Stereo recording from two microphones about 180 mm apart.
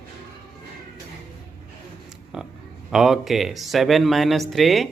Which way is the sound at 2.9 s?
Centre (ahead or behind).